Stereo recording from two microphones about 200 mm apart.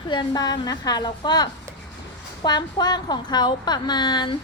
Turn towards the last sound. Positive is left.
turn(degrees=20)  # may be behind; listen again after turning